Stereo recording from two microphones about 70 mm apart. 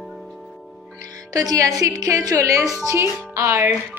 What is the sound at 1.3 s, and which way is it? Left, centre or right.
Speech, right.